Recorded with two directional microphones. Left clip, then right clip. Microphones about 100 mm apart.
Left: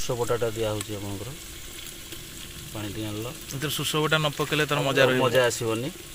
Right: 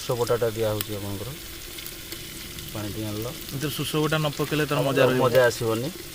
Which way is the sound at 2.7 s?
5° left (ahead or behind).